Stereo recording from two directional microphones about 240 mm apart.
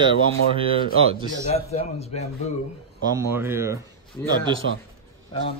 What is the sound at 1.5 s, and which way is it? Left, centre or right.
Speech, left.